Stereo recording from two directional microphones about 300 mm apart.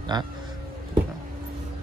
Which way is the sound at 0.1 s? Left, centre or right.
Centre.